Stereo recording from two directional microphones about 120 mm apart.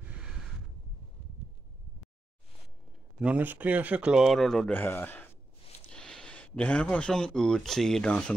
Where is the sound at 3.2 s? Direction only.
10° right (ahead or behind).